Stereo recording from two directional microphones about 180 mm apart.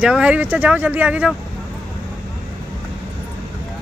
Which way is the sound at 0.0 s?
5° right (ahead or behind).